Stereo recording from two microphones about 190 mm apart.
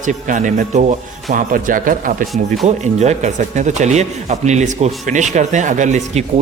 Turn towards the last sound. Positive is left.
turn(degrees=-40)  # may be behind; listen again after turning